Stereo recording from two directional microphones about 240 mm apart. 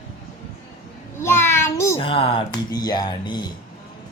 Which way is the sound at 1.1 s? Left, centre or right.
Centre.